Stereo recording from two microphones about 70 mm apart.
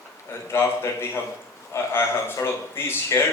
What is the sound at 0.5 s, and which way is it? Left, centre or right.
A man's voice, left.